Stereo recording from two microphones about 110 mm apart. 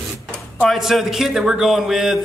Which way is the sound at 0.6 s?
Centre (ahead or behind).